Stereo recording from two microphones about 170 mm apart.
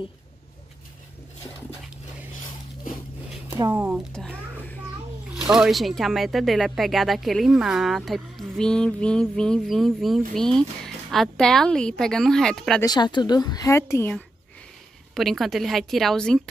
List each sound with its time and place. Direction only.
3.7 s speech: 10° right (ahead or behind)
5.3 s speech: 5° right (ahead or behind)
12.8 s a woman's voice: 25° left (ahead or behind)
15.1 s speech: centre (ahead or behind)